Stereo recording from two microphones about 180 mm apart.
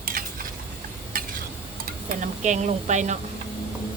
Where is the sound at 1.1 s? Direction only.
50° right (ahead or behind).